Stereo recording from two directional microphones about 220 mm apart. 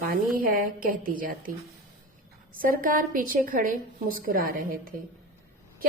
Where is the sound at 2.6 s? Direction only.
40° right (ahead or behind).